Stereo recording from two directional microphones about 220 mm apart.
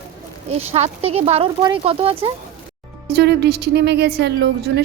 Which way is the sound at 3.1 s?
50° right (ahead or behind).